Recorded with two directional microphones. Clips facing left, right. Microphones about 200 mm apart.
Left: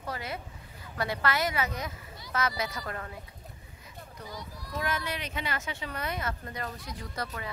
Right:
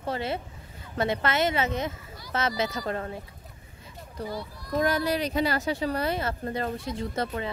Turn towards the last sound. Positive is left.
turn(degrees=-25)  # may be behind; listen again after turning